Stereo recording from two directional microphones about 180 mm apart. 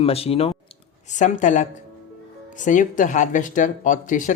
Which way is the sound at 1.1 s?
45° left (ahead or behind).